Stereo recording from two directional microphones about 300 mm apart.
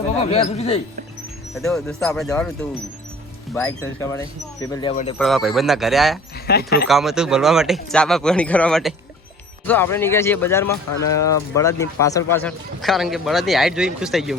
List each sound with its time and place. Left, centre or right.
0.2 s a man's voice: centre
1.5 s a man's voice: centre
5.1 s a man's voice: centre
6.5 s speech: left
6.8 s a man's voice: centre